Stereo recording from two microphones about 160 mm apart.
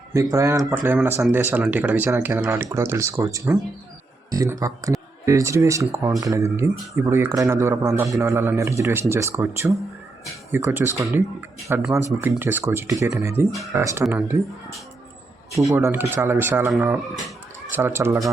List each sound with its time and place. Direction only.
0.1 s speech: 20° right (ahead or behind)
15.7 s speech: 15° right (ahead or behind)